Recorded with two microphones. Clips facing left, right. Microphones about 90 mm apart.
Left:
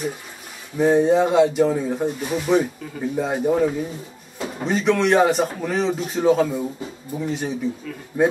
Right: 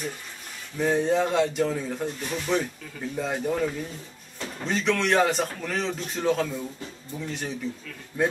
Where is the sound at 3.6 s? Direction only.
15° left (ahead or behind).